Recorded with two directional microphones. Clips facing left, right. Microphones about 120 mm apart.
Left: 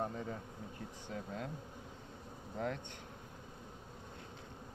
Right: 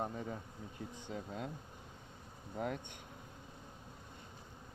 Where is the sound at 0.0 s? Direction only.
10° right (ahead or behind).